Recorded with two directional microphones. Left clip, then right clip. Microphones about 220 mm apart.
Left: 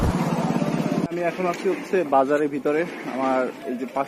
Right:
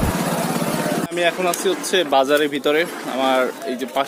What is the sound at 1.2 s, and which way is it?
Speech, 15° right (ahead or behind).